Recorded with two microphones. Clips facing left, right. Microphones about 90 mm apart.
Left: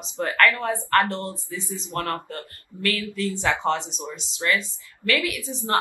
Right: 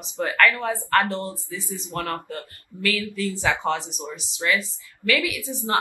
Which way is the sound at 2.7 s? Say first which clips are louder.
Even; 20° left (ahead or behind).